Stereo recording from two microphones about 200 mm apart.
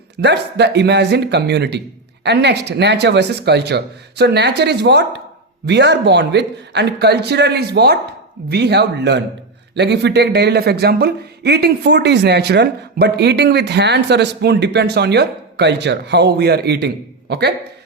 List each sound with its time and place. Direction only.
0.2 s speech: 55° right (ahead or behind)